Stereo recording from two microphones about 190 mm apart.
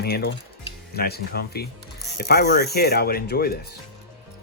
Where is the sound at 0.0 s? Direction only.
60° left (ahead or behind).